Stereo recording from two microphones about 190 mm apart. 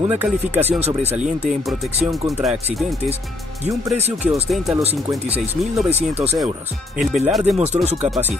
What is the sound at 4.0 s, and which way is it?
Speech, 35° right (ahead or behind).